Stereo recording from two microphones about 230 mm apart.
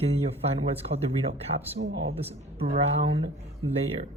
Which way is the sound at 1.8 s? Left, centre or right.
Right.